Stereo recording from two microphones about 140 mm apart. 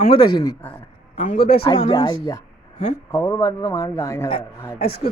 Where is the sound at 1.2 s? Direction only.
65° left (ahead or behind).